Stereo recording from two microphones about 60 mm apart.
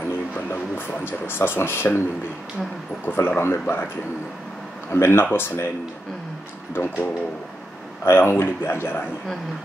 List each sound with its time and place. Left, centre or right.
0.5 s speech: left
3.1 s speech: left
4.9 s speech: left
6.7 s speech: left